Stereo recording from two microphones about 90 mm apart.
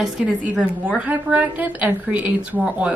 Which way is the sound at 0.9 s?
15° right (ahead or behind).